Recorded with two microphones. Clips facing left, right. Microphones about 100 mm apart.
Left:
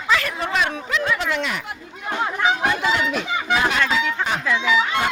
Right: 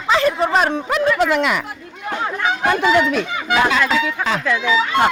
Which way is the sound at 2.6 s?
50° right (ahead or behind).